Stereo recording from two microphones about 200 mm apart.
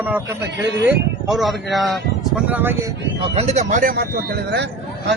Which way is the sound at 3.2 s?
30° right (ahead or behind).